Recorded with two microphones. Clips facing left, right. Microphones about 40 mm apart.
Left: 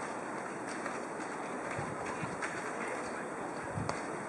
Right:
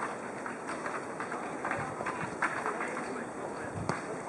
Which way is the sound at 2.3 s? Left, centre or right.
Centre.